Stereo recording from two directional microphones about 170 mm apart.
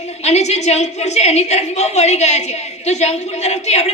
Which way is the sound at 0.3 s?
40° left (ahead or behind).